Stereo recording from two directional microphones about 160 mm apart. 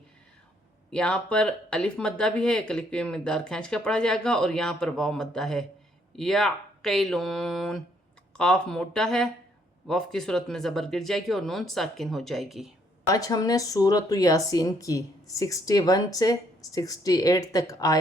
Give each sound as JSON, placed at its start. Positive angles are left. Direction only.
{"t": 0.9, "sound": "speech", "side_deg": 5}
{"t": 13.1, "sound": "speech", "side_deg": 20}